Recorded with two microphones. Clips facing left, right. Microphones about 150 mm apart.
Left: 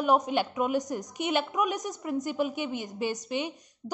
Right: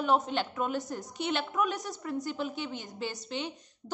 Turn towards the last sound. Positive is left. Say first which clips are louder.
# left 3 dB
turn(degrees=15)  # may be behind; listen again after turning